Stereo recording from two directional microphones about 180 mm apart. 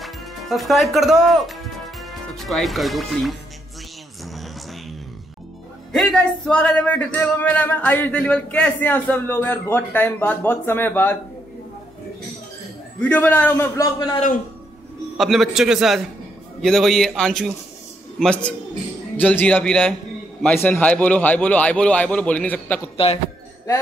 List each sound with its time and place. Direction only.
0.0 s music: centre (ahead or behind)
5.9 s speech: centre (ahead or behind)
13.0 s speech: 10° left (ahead or behind)
14.1 s a man's voice: 45° left (ahead or behind)
15.1 s a man's voice: centre (ahead or behind)